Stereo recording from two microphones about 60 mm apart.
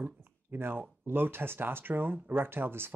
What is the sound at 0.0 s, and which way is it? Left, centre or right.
Speech, right.